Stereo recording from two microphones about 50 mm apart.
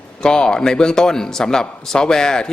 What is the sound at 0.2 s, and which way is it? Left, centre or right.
A man's voice, centre.